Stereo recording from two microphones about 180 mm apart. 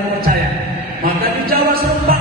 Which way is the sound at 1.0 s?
55° right (ahead or behind).